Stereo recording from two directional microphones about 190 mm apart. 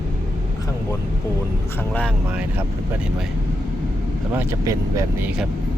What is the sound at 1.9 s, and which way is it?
Speech, 5° left (ahead or behind).